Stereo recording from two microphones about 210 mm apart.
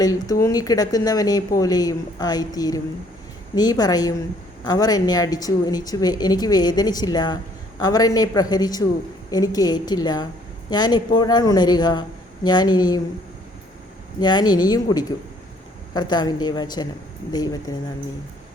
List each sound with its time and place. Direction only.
0.0 s a woman's voice: 15° left (ahead or behind)
14.2 s a woman's voice: 20° left (ahead or behind)